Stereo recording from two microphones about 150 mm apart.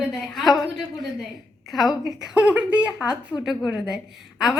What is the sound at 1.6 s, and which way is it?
A woman's voice, centre (ahead or behind).